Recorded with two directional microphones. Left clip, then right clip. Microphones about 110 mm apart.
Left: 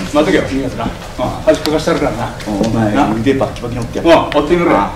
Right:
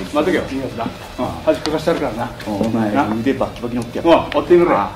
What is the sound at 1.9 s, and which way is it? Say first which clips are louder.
Speech: left 4 dB; 25° left (ahead or behind).